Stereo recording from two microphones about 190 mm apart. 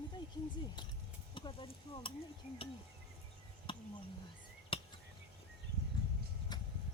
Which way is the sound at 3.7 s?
25° left (ahead or behind).